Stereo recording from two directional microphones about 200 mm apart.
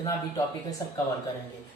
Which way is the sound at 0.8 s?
20° left (ahead or behind).